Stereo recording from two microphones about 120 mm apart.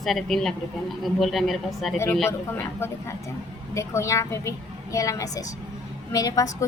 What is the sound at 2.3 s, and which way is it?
A woman's voice, 20° left (ahead or behind).